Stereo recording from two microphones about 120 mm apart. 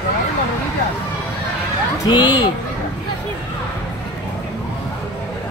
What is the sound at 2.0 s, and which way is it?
Speech, 40° left (ahead or behind).